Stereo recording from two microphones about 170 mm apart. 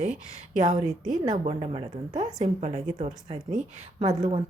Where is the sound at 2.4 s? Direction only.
40° right (ahead or behind).